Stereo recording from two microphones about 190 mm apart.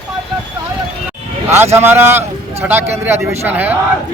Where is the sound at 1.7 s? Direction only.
10° right (ahead or behind).